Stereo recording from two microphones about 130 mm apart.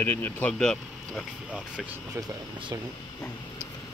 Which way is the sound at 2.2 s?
30° right (ahead or behind).